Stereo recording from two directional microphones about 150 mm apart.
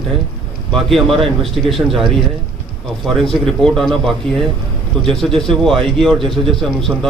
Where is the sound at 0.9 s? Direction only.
Centre (ahead or behind).